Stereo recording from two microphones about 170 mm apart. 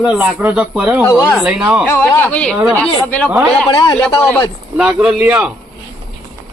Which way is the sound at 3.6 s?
25° left (ahead or behind).